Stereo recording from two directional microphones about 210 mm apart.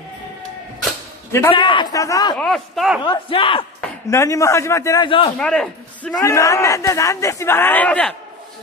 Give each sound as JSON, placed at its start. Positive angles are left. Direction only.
{"t": 1.5, "sound": "a man's voice", "side_deg": 20}
{"t": 2.3, "sound": "speech", "side_deg": 0}
{"t": 3.0, "sound": "a man's voice", "side_deg": 25}
{"t": 3.8, "sound": "a man's voice", "side_deg": 15}
{"t": 5.4, "sound": "a man's voice", "side_deg": 5}